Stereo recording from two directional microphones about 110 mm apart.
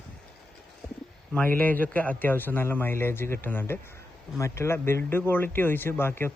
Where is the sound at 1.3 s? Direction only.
15° left (ahead or behind).